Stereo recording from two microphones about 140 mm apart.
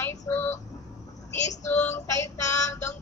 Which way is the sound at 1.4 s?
60° left (ahead or behind).